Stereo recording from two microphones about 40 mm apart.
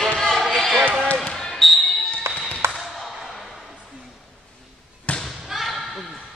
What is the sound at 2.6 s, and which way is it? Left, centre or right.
Basketball bounce, right.